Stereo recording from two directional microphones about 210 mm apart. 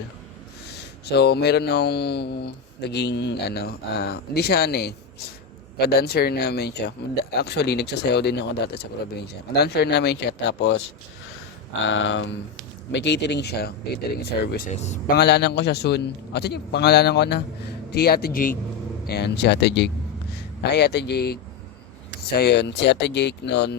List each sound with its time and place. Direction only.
0.8 s speech: 50° left (ahead or behind)
11.9 s speech: 65° left (ahead or behind); by 15.1 s 35° left (ahead or behind)
15.1 s speech: 50° left (ahead or behind)